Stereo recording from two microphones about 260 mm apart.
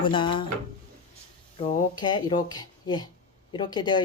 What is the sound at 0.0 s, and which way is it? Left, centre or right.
Speech, centre.